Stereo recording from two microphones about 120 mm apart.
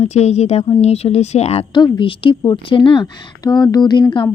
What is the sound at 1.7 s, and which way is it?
A woman's voice, 40° left (ahead or behind).